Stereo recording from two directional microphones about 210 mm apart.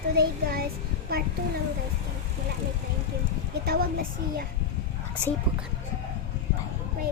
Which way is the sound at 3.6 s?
45° right (ahead or behind).